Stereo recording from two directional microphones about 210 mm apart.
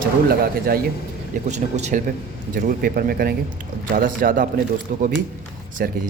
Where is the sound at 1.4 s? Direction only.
35° right (ahead or behind).